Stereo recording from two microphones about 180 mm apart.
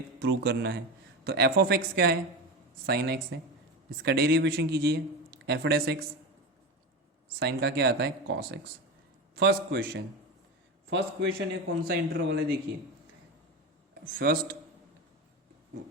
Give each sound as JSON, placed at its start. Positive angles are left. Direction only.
{"t": 0.2, "sound": "speech", "side_deg": -65}
{"t": 7.3, "sound": "speech", "side_deg": -60}
{"t": 10.8, "sound": "a man's voice", "side_deg": -90}
{"t": 11.8, "sound": "speech", "side_deg": -65}
{"t": 14.0, "sound": "speech", "side_deg": -55}